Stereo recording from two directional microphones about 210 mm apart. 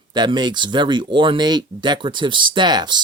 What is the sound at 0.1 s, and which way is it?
Speech, 20° right (ahead or behind).